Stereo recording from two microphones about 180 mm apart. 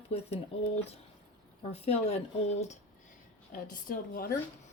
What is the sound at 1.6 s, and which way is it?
Speech, 35° left (ahead or behind).